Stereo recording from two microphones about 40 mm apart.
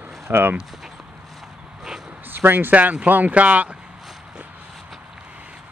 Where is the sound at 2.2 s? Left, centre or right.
Right.